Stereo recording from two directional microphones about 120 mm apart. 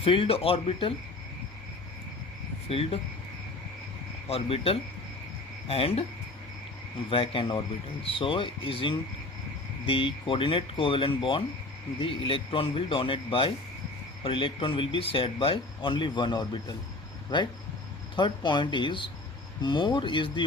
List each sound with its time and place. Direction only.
0.0 s speech: 50° left (ahead or behind)
2.6 s speech: 55° left (ahead or behind)
4.3 s speech: 55° left (ahead or behind)
7.1 s speech: 45° left (ahead or behind)